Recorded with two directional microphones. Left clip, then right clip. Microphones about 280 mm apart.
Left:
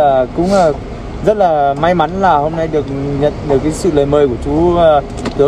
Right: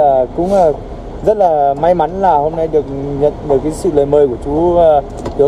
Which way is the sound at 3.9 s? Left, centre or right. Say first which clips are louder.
Right 1 dB; left.